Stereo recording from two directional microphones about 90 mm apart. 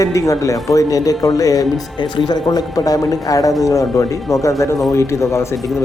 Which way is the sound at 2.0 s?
55° left (ahead or behind).